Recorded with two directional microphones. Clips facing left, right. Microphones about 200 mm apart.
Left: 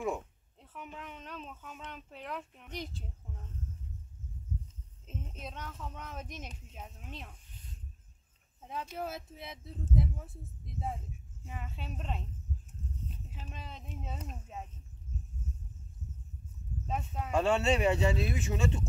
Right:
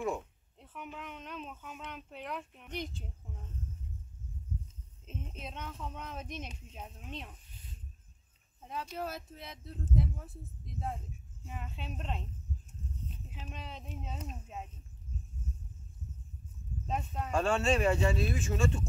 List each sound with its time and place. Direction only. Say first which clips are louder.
0.6 s speech: right 1 dB; centre (ahead or behind)
5.0 s speech: even; centre (ahead or behind)
8.6 s speech: even; 5° left (ahead or behind)
13.3 s speech: right 1 dB; 5° left (ahead or behind)
16.8 s speech: right 1 dB; 5° left (ahead or behind)
17.5 s speech: left 1 dB; 20° left (ahead or behind)